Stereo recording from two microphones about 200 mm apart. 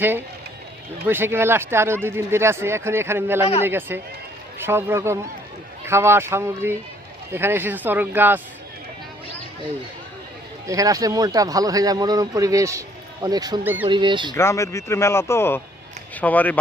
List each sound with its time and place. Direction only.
1.0 s speech: 10° right (ahead or behind)
10.7 s speech: 15° right (ahead or behind)
14.3 s speech: 15° left (ahead or behind)